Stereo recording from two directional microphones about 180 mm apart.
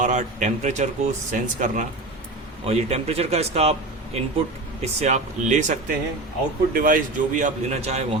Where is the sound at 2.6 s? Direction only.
35° right (ahead or behind).